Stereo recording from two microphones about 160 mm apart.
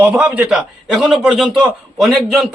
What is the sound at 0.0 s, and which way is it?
A man's voice, 10° right (ahead or behind).